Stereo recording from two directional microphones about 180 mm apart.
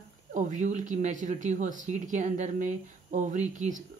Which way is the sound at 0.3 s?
45° right (ahead or behind).